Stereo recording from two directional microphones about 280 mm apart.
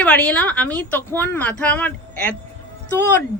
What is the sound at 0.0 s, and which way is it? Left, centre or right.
Speech, centre.